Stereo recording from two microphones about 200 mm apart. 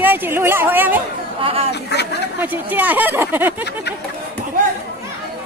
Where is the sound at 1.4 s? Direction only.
30° right (ahead or behind).